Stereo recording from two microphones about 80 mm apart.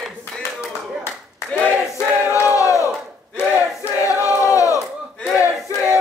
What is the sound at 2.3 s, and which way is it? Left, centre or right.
Battle cry, left.